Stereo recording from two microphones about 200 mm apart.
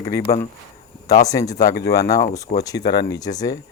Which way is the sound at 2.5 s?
50° left (ahead or behind).